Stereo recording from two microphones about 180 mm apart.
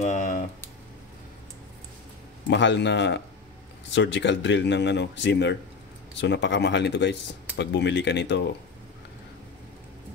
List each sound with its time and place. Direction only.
0.0 s speech: 45° left (ahead or behind)
2.5 s speech: 80° left